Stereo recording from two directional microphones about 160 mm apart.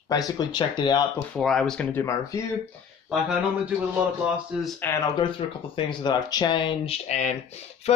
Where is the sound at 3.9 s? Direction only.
5° right (ahead or behind).